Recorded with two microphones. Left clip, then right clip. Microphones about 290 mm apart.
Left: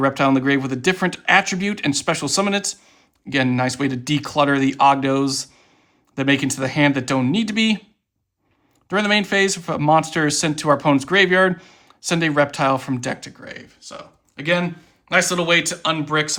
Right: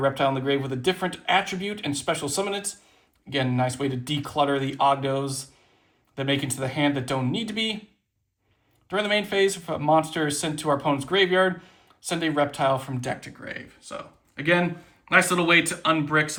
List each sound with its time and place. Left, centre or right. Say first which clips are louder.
0.3 s speech: left 6 dB; left
8.9 s speech: left 6 dB; left